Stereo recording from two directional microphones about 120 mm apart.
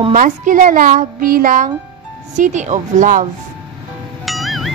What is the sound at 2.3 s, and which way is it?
Speech, 90° right.